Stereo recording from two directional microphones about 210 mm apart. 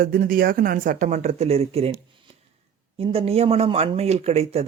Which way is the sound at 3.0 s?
30° right (ahead or behind).